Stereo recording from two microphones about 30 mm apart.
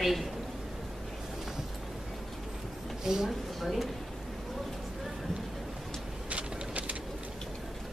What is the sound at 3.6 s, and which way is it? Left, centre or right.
Speech, centre.